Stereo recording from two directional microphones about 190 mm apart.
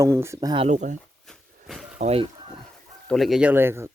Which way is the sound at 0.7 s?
40° right (ahead or behind).